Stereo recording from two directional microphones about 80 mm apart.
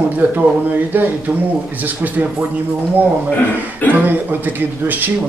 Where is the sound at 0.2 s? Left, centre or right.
Right.